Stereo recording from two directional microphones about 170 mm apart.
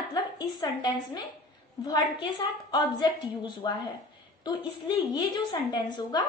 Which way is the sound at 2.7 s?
25° left (ahead or behind).